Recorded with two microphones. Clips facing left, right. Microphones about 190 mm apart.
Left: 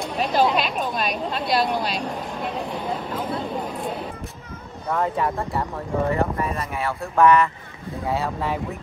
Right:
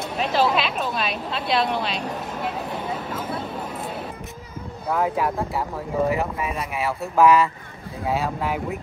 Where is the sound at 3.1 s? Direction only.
5° right (ahead or behind).